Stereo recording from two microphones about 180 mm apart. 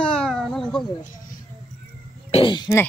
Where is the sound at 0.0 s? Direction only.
5° left (ahead or behind).